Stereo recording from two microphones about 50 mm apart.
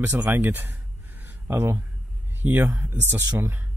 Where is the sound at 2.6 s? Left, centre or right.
Right.